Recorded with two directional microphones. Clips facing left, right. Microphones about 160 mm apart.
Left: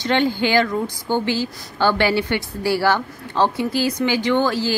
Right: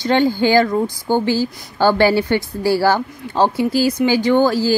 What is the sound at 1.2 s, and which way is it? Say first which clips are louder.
Speech: right 4 dB; 20° left (ahead or behind).